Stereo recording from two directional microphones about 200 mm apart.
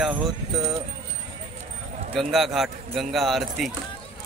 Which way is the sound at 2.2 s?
Centre (ahead or behind).